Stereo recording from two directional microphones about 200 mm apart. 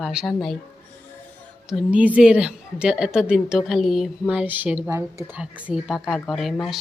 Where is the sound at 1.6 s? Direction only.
5° right (ahead or behind).